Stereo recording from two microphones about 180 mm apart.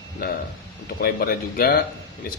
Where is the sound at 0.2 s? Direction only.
55° left (ahead or behind).